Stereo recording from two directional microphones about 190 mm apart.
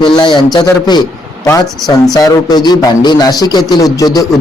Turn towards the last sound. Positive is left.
turn(degrees=20)  # may be behind; listen again after turning